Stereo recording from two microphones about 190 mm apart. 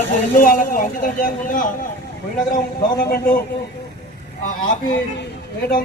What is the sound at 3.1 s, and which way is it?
Speech, 50° left (ahead or behind).